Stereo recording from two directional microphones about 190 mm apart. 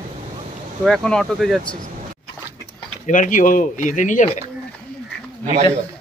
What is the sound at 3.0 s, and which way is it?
Speech, 45° left (ahead or behind).